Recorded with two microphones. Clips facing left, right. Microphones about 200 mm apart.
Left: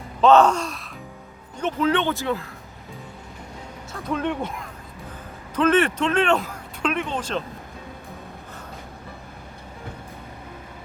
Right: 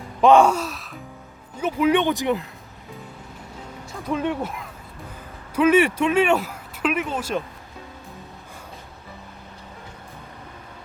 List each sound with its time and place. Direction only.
0.2 s music: 10° right (ahead or behind)
1.5 s speech: 10° right (ahead or behind)
4.1 s speech: 5° right (ahead or behind)